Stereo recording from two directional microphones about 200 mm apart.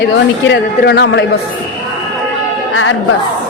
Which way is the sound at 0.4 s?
55° left (ahead or behind).